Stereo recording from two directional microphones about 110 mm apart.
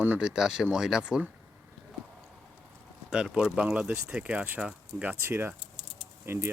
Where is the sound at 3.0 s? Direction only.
10° right (ahead or behind).